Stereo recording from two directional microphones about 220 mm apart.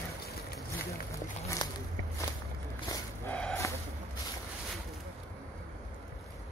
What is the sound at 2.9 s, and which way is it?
Dog, 5° left (ahead or behind).